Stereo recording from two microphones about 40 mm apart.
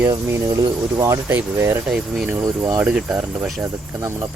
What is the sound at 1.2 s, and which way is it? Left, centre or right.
Speech, right.